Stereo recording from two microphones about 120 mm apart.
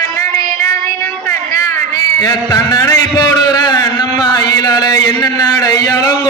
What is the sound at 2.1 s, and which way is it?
A man's voice, 30° left (ahead or behind).